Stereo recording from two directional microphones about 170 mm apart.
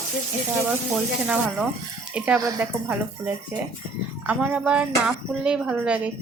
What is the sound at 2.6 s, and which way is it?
A woman's voice, 10° right (ahead or behind).